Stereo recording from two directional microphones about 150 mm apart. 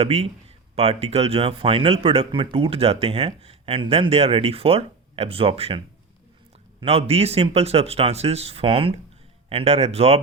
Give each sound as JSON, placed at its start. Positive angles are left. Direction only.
{"t": 0.0, "sound": "speech", "side_deg": -45}